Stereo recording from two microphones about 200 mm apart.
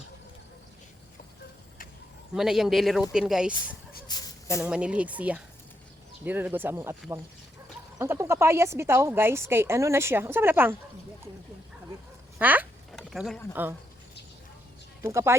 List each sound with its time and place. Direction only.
2.3 s speech: centre (ahead or behind)
4.1 s a sound: 15° left (ahead or behind)
4.6 s speech: 5° right (ahead or behind)
7.9 s speech: 10° right (ahead or behind)
12.4 s speech: 10° right (ahead or behind)
12.9 s a sound: centre (ahead or behind)
13.5 s speech: 10° right (ahead or behind)
15.0 s speech: 15° right (ahead or behind)